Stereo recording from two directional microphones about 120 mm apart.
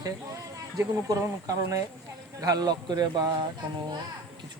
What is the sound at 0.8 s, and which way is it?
Speech, 25° right (ahead or behind).